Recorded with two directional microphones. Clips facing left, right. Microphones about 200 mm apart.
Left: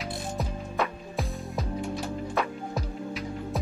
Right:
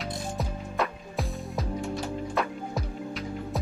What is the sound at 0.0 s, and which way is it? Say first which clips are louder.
Music: even; centre (ahead or behind).